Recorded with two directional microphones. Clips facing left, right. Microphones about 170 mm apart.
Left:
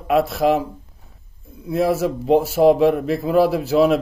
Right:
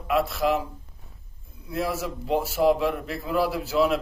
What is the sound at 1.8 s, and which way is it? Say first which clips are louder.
Speech: left 9 dB; 55° left (ahead or behind).